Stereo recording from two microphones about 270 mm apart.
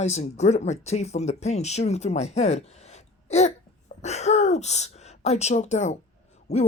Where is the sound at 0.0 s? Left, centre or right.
Left.